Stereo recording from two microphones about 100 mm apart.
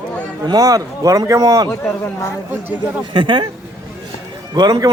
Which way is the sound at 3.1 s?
55° right (ahead or behind).